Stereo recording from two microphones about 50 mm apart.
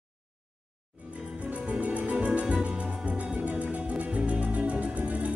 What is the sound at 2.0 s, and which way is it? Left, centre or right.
Music, right.